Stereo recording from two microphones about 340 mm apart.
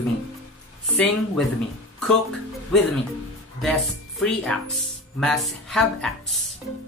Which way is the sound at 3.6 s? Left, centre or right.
Centre.